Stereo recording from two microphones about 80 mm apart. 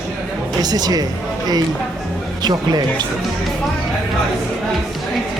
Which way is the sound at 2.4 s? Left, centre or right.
Right.